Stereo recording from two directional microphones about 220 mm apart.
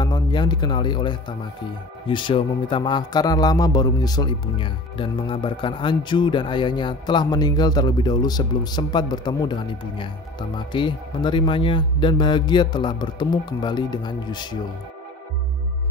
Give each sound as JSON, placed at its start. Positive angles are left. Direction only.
{"t": 0.0, "sound": "a man's voice", "side_deg": 20}